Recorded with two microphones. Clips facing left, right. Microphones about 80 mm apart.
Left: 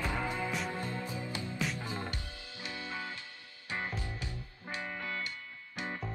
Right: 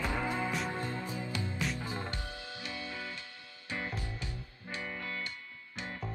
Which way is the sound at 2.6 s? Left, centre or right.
Left.